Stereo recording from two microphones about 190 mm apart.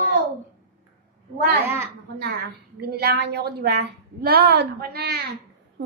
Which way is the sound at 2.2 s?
55° right (ahead or behind).